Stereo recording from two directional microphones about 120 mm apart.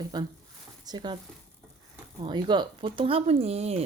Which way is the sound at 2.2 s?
40° right (ahead or behind).